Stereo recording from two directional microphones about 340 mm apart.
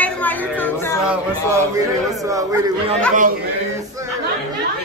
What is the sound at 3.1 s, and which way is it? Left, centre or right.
Speech, right.